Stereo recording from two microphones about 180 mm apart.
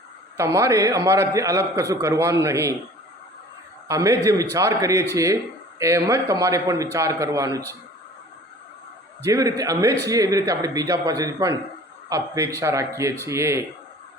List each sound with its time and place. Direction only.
0.3 s a man's voice: 15° right (ahead or behind)
3.8 s a man's voice: 15° right (ahead or behind)
9.2 s a man's voice: 15° right (ahead or behind)